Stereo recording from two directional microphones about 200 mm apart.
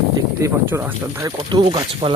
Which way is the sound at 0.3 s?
10° right (ahead or behind).